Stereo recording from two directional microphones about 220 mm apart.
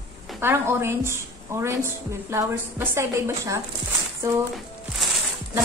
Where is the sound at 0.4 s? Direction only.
10° right (ahead or behind).